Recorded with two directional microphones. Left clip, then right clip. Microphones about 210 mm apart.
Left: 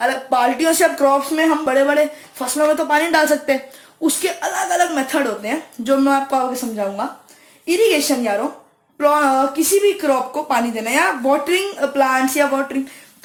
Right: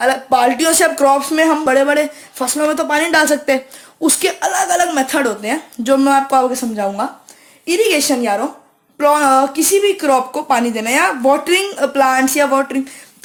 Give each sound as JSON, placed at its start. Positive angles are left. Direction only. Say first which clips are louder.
{"t": 0.0, "sound": "speech", "louder": "right 4 dB", "side_deg": -50}